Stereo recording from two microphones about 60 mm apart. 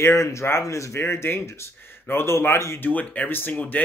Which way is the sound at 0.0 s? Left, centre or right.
Left.